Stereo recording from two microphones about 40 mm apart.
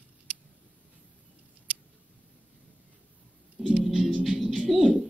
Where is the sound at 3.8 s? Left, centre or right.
Centre.